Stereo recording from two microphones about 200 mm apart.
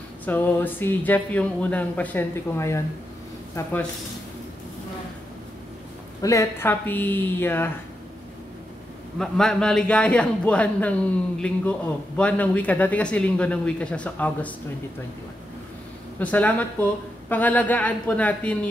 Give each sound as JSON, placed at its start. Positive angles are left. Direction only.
{"t": 0.2, "sound": "speech", "side_deg": 10}
{"t": 6.2, "sound": "speech", "side_deg": 15}
{"t": 9.2, "sound": "a man's voice", "side_deg": 5}
{"t": 16.2, "sound": "speech", "side_deg": 5}